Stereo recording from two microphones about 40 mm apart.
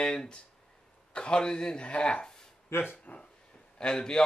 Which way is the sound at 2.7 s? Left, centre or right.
Left.